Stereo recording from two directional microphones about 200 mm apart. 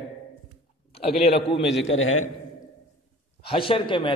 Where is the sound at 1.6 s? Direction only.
65° left (ahead or behind); by 2.2 s 90° left.